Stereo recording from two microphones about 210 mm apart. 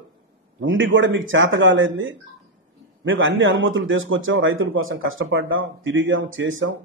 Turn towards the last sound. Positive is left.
turn(degrees=-65)  # may be behind; listen again after turning